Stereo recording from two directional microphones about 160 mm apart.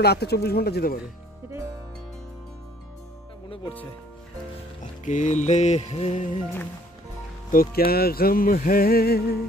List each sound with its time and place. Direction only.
0.0 s speech: 90° left
5.0 s music: 50° left (ahead or behind)
7.5 s speech: 70° left (ahead or behind)